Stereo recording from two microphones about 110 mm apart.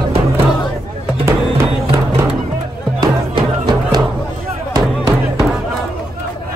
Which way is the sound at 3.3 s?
40° right (ahead or behind).